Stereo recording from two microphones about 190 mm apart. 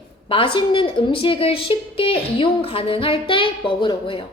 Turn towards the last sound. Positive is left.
turn(degrees=25)  # may be behind; listen again after turning